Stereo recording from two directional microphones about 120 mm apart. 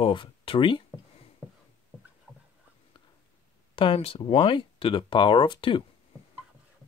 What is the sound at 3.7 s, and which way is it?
Speech, 50° left (ahead or behind).